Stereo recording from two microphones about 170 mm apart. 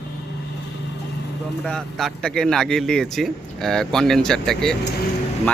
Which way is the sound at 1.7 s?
Centre (ahead or behind).